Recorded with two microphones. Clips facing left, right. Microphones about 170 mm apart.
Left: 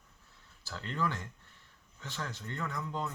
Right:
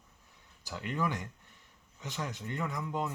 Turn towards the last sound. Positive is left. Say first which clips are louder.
# right 2 dB
turn(degrees=-15)  # may be behind; listen again after turning